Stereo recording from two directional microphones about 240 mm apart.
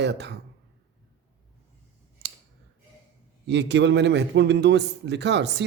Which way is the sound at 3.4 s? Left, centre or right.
Right.